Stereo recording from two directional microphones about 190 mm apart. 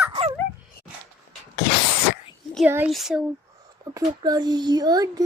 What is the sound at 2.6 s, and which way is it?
Speech, 10° right (ahead or behind).